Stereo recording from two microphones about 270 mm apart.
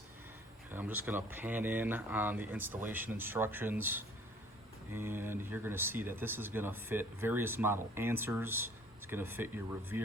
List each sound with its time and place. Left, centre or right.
0.7 s speech: centre